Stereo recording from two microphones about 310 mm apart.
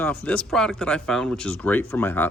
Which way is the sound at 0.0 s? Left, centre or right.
Centre.